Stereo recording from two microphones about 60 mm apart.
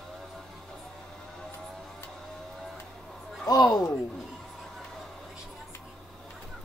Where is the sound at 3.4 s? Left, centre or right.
Left.